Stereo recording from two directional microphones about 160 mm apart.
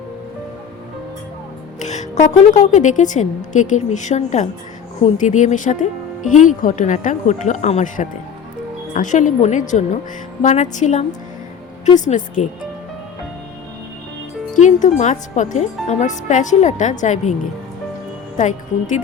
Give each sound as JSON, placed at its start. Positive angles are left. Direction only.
{"t": 1.8, "sound": "speech", "side_deg": 50}
{"t": 14.5, "sound": "speech", "side_deg": 50}
{"t": 18.3, "sound": "speech", "side_deg": 50}